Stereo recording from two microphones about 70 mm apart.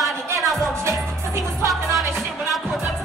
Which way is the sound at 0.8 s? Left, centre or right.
Right.